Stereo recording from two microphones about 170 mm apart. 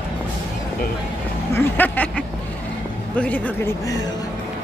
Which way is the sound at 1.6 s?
10° left (ahead or behind).